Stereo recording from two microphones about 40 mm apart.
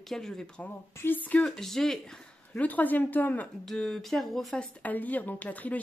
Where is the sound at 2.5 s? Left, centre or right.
Left.